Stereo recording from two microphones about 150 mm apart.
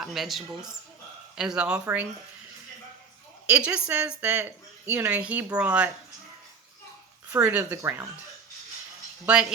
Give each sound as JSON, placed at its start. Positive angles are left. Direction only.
{"t": 0.0, "sound": "speech", "side_deg": 0}
{"t": 3.5, "sound": "speech", "side_deg": -10}
{"t": 7.3, "sound": "speech", "side_deg": -15}
{"t": 9.2, "sound": "speech", "side_deg": -5}